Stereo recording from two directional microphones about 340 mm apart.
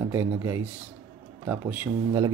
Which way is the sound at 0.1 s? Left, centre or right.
Centre.